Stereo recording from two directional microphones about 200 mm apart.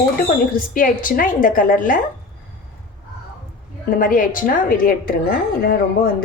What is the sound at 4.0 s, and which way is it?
A woman's voice, 45° left (ahead or behind).